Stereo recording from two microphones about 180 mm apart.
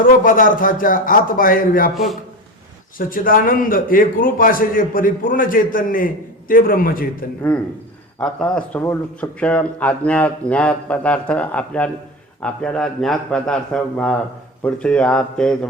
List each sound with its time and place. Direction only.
0.0 s a man's voice: 50° left (ahead or behind)
8.2 s a man's voice: 5° left (ahead or behind)